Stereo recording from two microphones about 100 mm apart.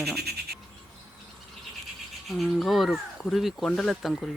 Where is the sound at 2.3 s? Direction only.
Centre (ahead or behind).